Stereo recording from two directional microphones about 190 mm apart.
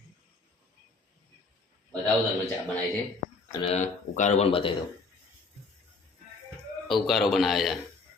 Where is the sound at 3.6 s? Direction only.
30° left (ahead or behind).